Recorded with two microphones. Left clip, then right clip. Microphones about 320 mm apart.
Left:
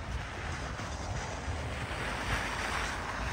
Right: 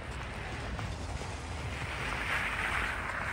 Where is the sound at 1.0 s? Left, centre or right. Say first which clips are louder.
Left 3 dB; left.